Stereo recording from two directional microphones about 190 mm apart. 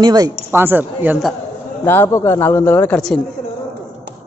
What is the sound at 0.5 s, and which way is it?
Speech, 10° right (ahead or behind).